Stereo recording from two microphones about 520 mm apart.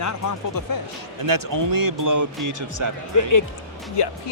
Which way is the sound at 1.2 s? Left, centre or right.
Right.